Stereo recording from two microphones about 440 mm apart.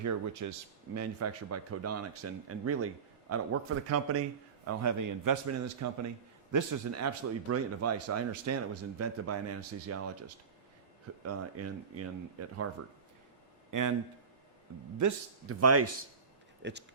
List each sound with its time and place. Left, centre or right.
0.0 s a man's voice: right
13.7 s a man's voice: right
14.9 s speech: right